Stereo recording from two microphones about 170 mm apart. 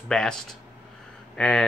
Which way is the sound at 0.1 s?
5° left (ahead or behind).